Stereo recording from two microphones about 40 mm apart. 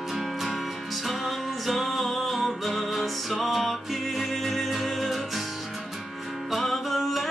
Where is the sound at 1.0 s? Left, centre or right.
Centre.